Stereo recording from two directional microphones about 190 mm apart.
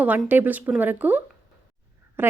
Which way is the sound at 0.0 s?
10° right (ahead or behind).